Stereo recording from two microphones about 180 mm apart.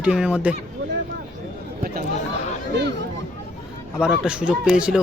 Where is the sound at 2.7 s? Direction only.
70° right (ahead or behind).